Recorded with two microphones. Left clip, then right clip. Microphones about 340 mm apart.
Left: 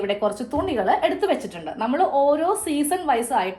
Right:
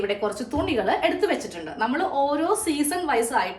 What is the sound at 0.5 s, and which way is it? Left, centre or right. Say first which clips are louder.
A woman's voice: left 1 dB; centre.